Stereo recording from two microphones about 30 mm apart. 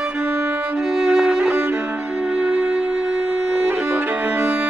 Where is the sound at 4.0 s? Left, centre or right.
Right.